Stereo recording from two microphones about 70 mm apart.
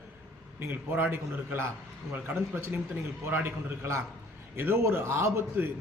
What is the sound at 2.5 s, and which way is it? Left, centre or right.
A man's voice, right.